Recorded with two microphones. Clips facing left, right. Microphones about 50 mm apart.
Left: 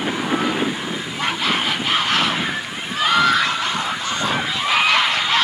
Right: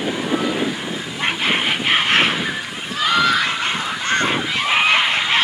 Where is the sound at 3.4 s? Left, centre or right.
Right.